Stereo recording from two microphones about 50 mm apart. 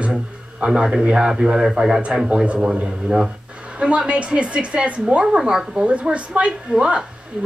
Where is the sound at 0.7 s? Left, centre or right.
Centre.